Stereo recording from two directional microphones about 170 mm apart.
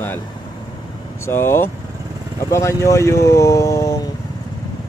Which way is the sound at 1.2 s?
15° left (ahead or behind).